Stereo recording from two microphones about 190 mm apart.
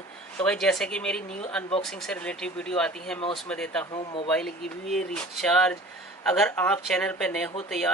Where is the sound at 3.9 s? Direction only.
25° left (ahead or behind).